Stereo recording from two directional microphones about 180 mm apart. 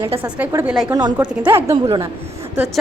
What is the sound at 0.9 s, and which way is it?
Speech, 25° right (ahead or behind).